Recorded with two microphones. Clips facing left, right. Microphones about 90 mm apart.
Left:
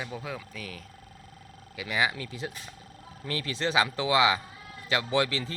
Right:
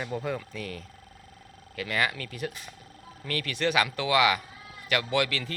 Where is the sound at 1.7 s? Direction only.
15° left (ahead or behind).